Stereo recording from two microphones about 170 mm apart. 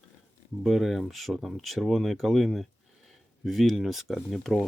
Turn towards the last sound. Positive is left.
turn(degrees=0)  # may be behind; listen again after turning